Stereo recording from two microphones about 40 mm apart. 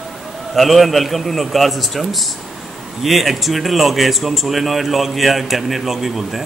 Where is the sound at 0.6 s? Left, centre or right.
Centre.